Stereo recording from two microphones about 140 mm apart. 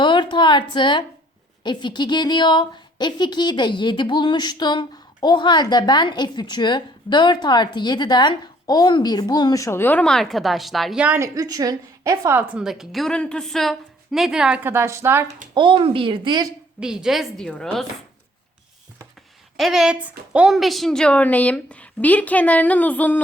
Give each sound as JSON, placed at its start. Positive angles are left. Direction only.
{"t": 0.0, "sound": "a woman's voice", "side_deg": 35}
{"t": 11.0, "sound": "a woman's voice", "side_deg": -10}
{"t": 11.3, "sound": "a woman's voice", "side_deg": -25}
{"t": 15.5, "sound": "a woman's voice", "side_deg": -35}
{"t": 16.8, "sound": "a woman's voice", "side_deg": -5}
{"t": 19.5, "sound": "a woman's voice", "side_deg": 0}